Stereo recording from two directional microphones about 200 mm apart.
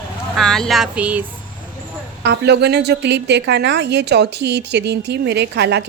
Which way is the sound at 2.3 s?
55° right (ahead or behind).